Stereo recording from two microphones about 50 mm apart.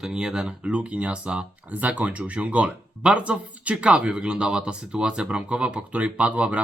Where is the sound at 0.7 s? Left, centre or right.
Right.